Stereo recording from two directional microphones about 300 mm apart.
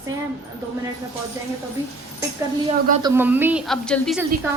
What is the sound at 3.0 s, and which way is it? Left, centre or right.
A woman's voice, centre.